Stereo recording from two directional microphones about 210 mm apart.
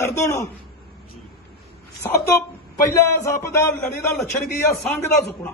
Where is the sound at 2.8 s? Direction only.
15° left (ahead or behind).